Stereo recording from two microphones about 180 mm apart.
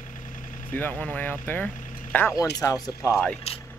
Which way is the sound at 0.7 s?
10° left (ahead or behind).